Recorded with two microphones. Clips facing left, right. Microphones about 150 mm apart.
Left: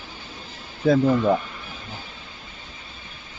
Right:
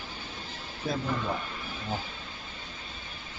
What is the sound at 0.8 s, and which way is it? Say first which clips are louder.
Speech: left 13 dB; 90° left.